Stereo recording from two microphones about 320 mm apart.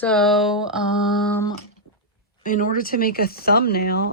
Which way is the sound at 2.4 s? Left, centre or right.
Left.